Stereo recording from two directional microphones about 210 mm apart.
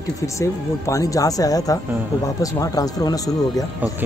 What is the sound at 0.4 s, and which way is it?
Speech, 15° left (ahead or behind).